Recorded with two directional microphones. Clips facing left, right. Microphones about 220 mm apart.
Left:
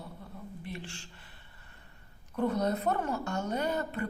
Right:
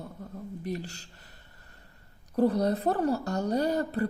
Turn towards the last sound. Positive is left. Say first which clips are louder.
# right 5 dB
turn(degrees=-35)  # may be behind; listen again after turning